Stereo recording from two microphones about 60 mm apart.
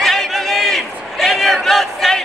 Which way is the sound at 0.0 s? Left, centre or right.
Centre.